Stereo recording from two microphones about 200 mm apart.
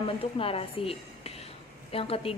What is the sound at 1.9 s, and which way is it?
Speech, 30° left (ahead or behind).